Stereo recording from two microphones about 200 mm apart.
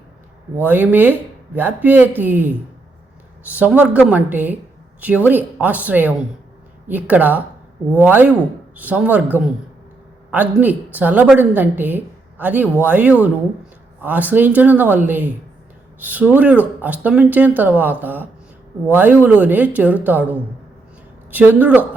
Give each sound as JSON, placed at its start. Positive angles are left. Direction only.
{"t": 0.5, "sound": "a woman's voice", "side_deg": -10}